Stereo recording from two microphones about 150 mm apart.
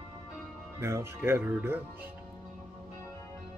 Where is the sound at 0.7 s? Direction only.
15° right (ahead or behind).